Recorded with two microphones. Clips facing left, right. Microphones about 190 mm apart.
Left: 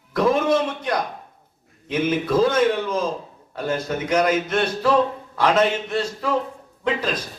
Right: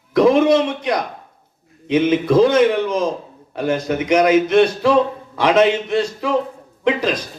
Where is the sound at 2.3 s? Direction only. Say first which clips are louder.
Right 5 dB; 15° right (ahead or behind).